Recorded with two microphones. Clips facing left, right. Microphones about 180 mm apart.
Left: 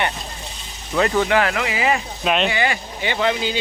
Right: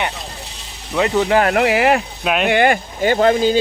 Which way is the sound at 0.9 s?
15° right (ahead or behind).